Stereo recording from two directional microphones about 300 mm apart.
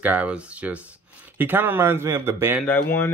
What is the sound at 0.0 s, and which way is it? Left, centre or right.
Speech, centre.